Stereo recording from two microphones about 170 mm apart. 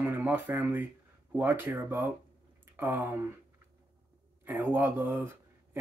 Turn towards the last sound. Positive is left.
turn(degrees=-10)  # may be behind; listen again after turning